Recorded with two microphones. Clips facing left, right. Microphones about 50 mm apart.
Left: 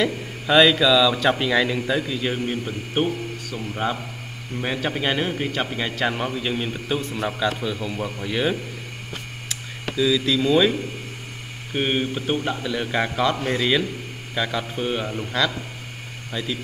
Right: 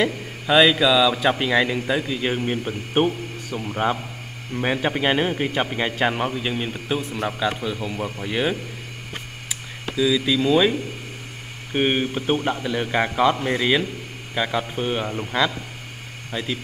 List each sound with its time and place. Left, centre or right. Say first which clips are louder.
0.5 s a man's voice: even; centre
2.5 s a man's voice: right 3 dB; right; by 8.5 s centre
9.9 s a man's voice: even; centre
11.7 s a man's voice: right 2 dB; centre